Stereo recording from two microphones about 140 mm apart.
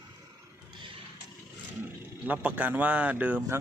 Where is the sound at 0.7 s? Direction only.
35° right (ahead or behind).